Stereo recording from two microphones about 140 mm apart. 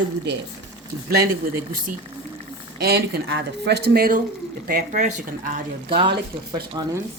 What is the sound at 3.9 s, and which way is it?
Speech, 90° right.